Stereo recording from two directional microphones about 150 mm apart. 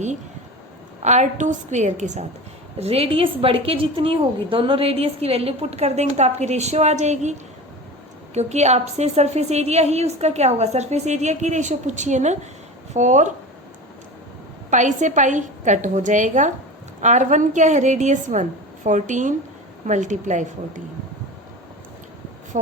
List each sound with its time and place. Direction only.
1.0 s a woman's voice: 50° right (ahead or behind)
14.7 s a woman's voice: 55° right (ahead or behind)
22.5 s a woman's voice: 55° right (ahead or behind)